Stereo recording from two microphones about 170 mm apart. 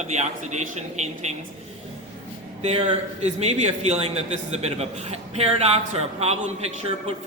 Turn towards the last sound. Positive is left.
turn(degrees=-40)  # may be behind; listen again after turning